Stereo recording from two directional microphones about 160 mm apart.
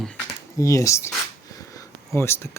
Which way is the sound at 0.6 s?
20° left (ahead or behind).